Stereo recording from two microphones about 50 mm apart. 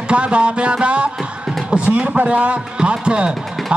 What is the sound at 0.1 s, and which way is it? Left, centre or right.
Speech, right.